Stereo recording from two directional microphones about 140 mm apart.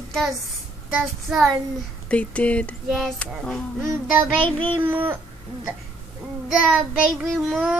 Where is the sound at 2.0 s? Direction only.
10° left (ahead or behind).